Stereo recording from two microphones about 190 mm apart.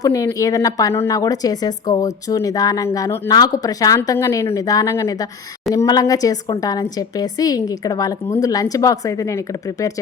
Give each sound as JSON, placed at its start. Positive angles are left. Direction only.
{"t": 0.0, "sound": "speech", "side_deg": 15}